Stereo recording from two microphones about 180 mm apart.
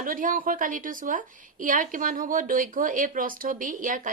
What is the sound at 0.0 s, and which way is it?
A woman's voice, 50° right (ahead or behind).